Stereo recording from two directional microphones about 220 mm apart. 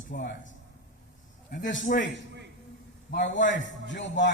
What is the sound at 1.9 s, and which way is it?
Speech, 40° left (ahead or behind).